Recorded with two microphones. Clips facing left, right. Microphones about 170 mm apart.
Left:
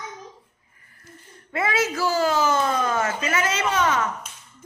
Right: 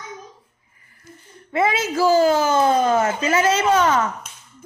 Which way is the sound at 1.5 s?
25° right (ahead or behind).